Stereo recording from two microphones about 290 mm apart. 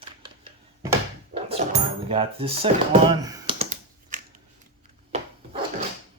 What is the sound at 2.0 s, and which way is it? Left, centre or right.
Speech, centre.